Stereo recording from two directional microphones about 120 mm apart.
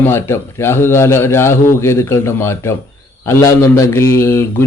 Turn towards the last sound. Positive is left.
turn(degrees=20)  # may be behind; listen again after turning